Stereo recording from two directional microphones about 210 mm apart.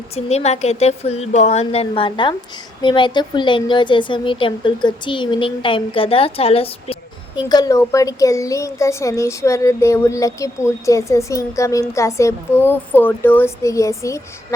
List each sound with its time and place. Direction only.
0.3 s a woman's voice: 30° left (ahead or behind); by 14.2 s 15° left (ahead or behind)